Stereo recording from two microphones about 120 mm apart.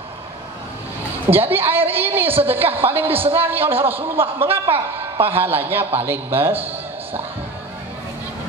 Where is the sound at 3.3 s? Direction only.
15° right (ahead or behind).